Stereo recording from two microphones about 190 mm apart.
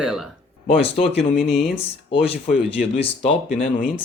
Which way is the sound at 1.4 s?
Centre (ahead or behind).